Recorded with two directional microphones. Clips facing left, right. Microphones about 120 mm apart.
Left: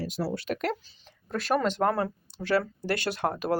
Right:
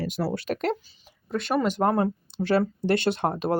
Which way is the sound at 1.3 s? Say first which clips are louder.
Right 2 dB; centre (ahead or behind).